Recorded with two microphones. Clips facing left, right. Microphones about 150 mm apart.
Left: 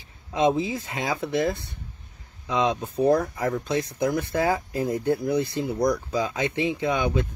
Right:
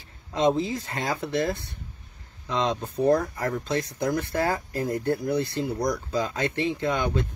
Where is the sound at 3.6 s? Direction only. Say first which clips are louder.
Left 2 dB; 15° left (ahead or behind).